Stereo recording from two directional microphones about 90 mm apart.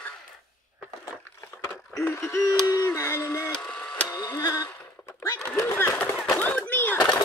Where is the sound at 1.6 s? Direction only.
30° left (ahead or behind).